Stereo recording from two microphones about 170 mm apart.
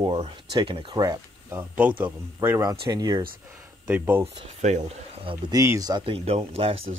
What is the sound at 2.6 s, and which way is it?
Speech, 25° right (ahead or behind).